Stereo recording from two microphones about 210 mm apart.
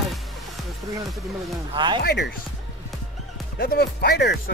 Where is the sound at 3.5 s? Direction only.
50° left (ahead or behind).